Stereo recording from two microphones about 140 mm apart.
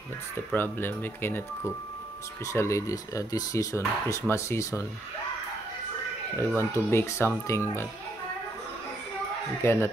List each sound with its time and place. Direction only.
0.5 s speech: 15° left (ahead or behind)
6.3 s speech: 20° left (ahead or behind)
9.6 s speech: 20° left (ahead or behind)